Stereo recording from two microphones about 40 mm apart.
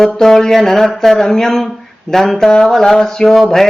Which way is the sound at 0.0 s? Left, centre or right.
Centre.